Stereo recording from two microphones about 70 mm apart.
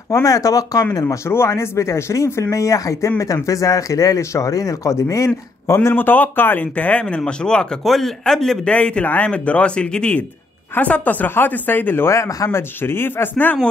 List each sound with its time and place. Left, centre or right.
0.1 s speech: left
1.0 s speech: left
5.9 s speech: left; by 8.7 s centre
8.7 s speech: centre; by 12.4 s left
12.4 s speech: left